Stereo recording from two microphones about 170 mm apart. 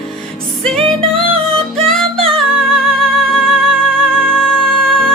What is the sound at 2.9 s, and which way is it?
Music, 5° left (ahead or behind).